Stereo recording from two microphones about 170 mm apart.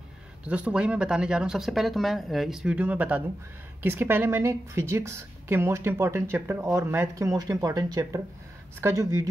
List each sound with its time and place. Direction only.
0.5 s a woman's voice: 5° right (ahead or behind)